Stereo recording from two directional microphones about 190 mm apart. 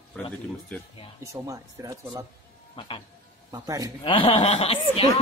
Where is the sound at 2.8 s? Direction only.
30° left (ahead or behind).